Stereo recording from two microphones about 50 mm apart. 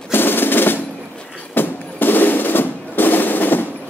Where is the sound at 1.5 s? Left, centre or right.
Left.